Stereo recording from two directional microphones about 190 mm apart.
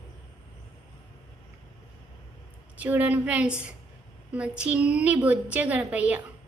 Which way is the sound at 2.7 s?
10° right (ahead or behind).